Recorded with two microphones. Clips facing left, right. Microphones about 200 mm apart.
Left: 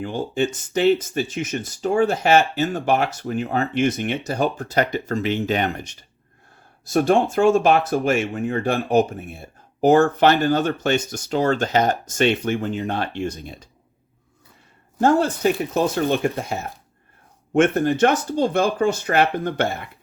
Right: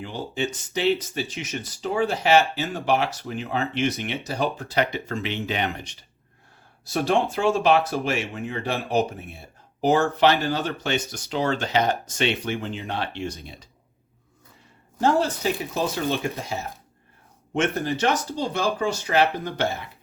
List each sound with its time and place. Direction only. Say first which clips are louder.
0.0 s speech: left 6 dB; 50° left (ahead or behind)
15.0 s speech: left 4 dB; 55° left (ahead or behind)